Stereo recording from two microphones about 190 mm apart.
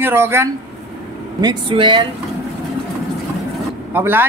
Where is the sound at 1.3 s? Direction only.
25° right (ahead or behind).